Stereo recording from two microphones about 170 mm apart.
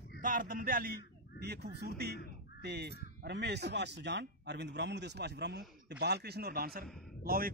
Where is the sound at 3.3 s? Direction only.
80° right.